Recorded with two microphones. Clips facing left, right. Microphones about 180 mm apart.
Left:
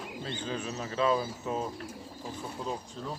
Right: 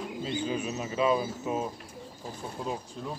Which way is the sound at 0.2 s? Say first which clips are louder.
Right 4 dB; 10° right (ahead or behind).